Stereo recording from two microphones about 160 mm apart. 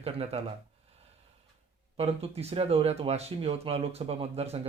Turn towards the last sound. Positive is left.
turn(degrees=-40)  # may be behind; listen again after turning